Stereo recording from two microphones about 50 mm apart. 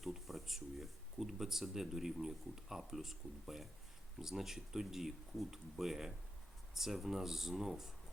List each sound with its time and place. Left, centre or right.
0.0 s speech: centre